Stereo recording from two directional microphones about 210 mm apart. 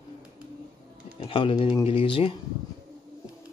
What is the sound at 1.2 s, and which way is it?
Speech, 25° left (ahead or behind).